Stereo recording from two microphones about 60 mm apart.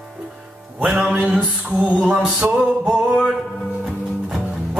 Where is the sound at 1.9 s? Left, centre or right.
Centre.